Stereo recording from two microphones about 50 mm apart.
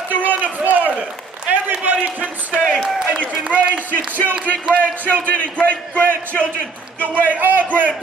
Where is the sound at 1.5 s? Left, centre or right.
Right.